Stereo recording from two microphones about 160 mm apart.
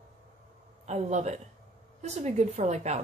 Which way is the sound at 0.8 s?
45° right (ahead or behind).